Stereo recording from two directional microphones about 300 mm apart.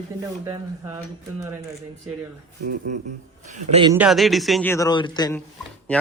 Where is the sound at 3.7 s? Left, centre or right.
Centre.